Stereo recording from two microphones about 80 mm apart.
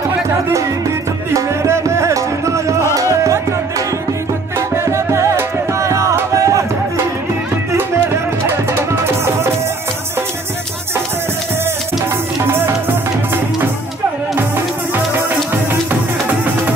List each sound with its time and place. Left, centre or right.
1.3 s music: right
4.6 s music: right
9.0 s music: right